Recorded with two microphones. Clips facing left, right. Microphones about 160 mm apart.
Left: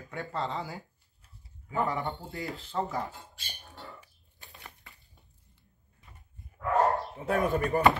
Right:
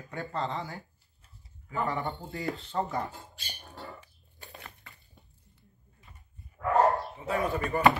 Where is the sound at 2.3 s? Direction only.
Centre (ahead or behind).